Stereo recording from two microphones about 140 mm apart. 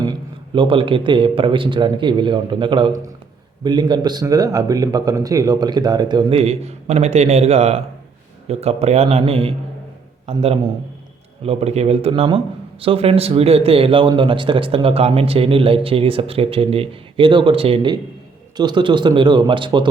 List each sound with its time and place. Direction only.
0.0 s a man's voice: 35° right (ahead or behind)
6.3 s speech: 50° right (ahead or behind)
18.5 s a man's voice: 30° right (ahead or behind)